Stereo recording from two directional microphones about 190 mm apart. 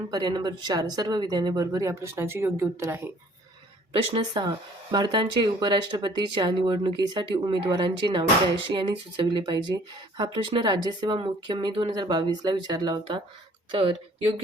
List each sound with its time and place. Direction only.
0.1 s speech: 20° right (ahead or behind)
3.9 s speech: 25° right (ahead or behind)